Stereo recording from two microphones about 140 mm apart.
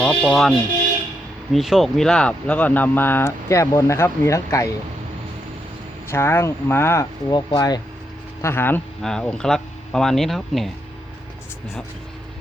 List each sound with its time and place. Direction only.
0.0 s speech: 5° left (ahead or behind)
1.5 s speech: centre (ahead or behind); by 4.7 s 20° left (ahead or behind)
6.1 s speech: 15° left (ahead or behind)
8.4 s speech: 15° left (ahead or behind)
9.0 s speech: 5° left (ahead or behind)